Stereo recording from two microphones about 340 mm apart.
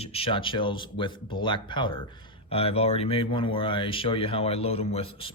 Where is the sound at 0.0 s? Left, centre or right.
Centre.